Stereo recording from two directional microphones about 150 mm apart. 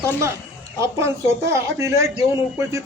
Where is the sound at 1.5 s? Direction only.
20° right (ahead or behind).